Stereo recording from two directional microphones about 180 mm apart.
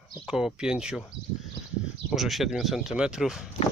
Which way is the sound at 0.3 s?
5° right (ahead or behind).